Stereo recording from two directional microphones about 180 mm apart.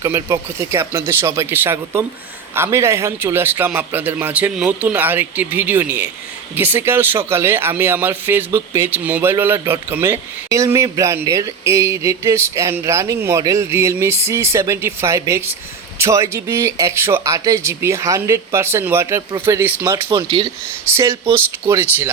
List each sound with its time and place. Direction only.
0.0 s speech: 15° right (ahead or behind)
20.1 s speech: 30° right (ahead or behind)
20.9 s speech: 15° right (ahead or behind)